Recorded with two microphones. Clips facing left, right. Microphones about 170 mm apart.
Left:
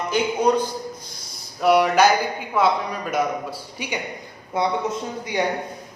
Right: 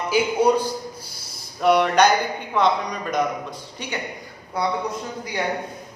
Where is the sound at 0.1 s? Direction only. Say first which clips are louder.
Right 1 dB; 10° right (ahead or behind).